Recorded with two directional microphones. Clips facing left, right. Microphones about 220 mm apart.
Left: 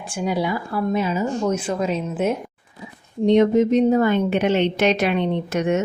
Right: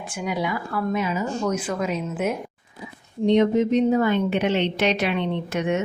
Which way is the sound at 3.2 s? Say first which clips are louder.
Left 3 dB; 45° left (ahead or behind).